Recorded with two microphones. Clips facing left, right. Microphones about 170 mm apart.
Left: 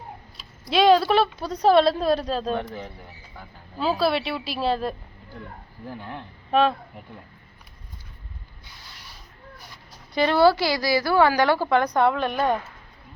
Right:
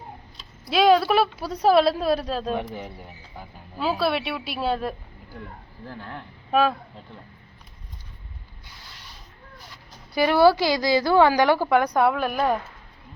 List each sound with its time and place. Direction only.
0.3 s a woman's voice: centre (ahead or behind)
2.6 s speech: 15° right (ahead or behind)
3.8 s a woman's voice: centre (ahead or behind)
5.9 s speech: 15° left (ahead or behind)
6.5 s speech: 5° right (ahead or behind)
10.2 s a woman's voice: 10° right (ahead or behind)